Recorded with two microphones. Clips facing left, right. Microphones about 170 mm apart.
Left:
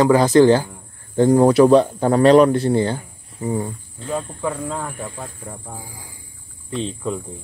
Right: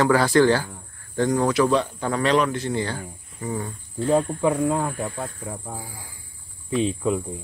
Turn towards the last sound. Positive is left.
turn(degrees=-5)  # may be behind; listen again after turning